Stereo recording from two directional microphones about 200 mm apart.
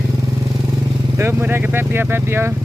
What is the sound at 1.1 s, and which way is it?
Speech, 10° right (ahead or behind).